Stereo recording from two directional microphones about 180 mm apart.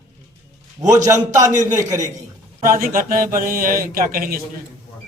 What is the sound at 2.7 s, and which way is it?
Speech, 50° right (ahead or behind).